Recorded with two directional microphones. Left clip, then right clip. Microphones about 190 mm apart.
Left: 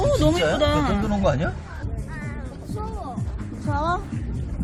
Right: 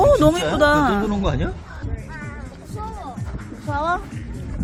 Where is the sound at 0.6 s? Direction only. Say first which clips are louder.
Right 6 dB; 20° right (ahead or behind).